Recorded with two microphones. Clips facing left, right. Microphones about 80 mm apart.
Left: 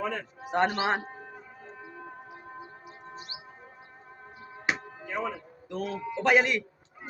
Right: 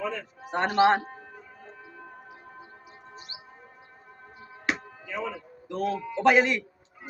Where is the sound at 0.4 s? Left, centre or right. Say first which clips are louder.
Right 5 dB; centre.